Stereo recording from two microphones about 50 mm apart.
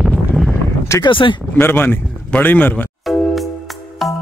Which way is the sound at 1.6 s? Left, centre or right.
Left.